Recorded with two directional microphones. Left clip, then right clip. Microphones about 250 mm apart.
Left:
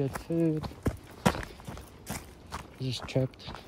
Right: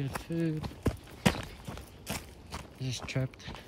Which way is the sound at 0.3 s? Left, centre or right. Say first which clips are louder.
Left 6 dB; centre.